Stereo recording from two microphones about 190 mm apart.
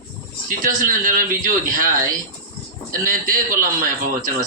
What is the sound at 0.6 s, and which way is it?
A woman's voice, 45° right (ahead or behind).